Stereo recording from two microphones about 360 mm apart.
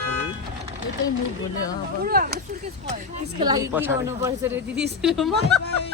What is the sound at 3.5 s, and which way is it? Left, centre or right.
Speech, centre.